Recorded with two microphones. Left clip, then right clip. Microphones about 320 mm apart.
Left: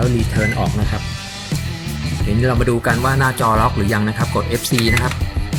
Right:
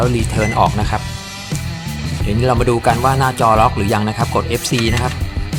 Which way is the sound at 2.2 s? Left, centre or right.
Centre.